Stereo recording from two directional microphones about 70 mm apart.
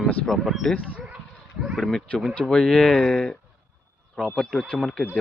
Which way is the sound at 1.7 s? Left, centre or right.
Centre.